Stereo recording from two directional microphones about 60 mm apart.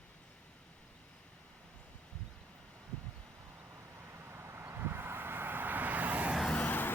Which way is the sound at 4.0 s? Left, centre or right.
Right.